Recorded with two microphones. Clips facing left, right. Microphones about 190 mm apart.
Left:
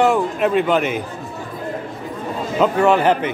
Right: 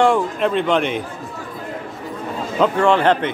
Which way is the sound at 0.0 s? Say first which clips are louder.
Even; 5° left (ahead or behind).